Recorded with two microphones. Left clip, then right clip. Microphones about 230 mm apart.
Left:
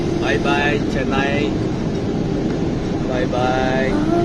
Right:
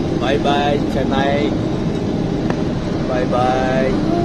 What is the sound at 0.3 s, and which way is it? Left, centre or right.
Speech, left.